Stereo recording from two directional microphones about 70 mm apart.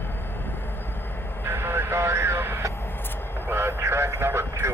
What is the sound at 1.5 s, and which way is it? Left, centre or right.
Vehicle, right.